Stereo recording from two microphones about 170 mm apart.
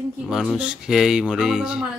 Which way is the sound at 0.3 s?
Centre (ahead or behind).